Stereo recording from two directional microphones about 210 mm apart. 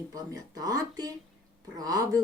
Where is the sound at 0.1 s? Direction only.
15° right (ahead or behind).